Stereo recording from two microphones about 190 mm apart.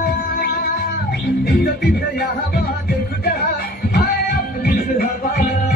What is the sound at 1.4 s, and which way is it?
Music, 60° left (ahead or behind).